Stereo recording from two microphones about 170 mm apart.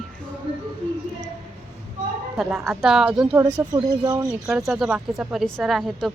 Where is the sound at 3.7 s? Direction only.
25° right (ahead or behind).